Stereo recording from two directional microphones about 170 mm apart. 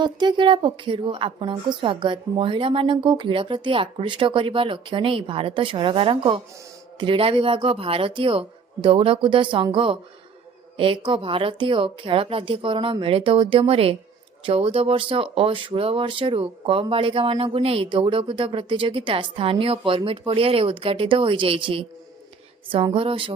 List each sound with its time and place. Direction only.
0.0 s a woman's voice: 25° right (ahead or behind)